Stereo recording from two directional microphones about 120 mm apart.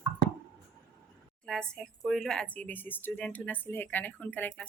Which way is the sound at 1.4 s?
5° left (ahead or behind).